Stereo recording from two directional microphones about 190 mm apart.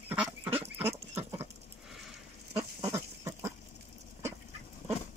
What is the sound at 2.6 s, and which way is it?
Duck, 10° right (ahead or behind).